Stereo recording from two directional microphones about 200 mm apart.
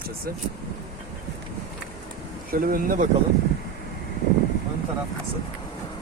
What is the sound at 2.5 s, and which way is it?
Speech, 45° right (ahead or behind).